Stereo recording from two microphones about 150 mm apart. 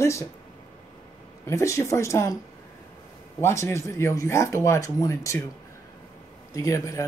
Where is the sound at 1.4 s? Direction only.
20° left (ahead or behind).